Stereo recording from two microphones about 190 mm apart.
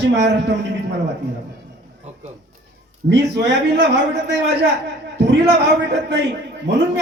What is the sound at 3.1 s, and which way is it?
Speech, 65° right (ahead or behind).